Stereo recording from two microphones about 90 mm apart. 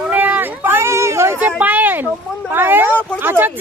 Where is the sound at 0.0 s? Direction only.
20° right (ahead or behind).